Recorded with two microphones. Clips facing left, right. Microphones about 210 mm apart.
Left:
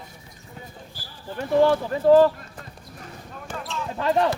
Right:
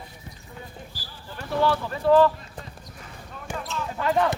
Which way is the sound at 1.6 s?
45° left (ahead or behind).